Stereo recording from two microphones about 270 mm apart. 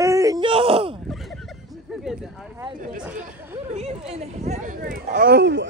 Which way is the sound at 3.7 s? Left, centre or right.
Right.